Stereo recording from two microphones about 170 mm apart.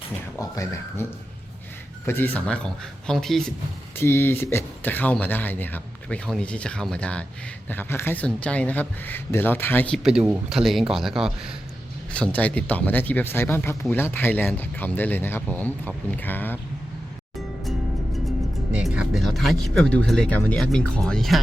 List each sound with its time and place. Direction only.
0.3 s speech: 20° left (ahead or behind)
2.0 s speech: 10° left (ahead or behind)
3.9 s speech: 15° left (ahead or behind)
10.0 s speech: 5° right (ahead or behind)
18.7 s speech: 5° right (ahead or behind)